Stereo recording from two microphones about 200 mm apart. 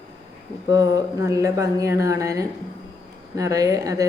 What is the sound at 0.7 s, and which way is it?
A woman's voice, 15° right (ahead or behind).